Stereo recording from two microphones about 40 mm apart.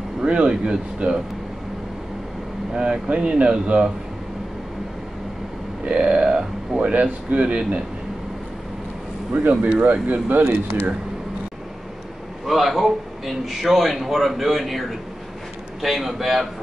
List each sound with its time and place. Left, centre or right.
0.2 s speech: right
2.7 s speech: centre
6.0 s speech: right
6.8 s speech: right
9.3 s speech: right
12.4 s a man's voice: centre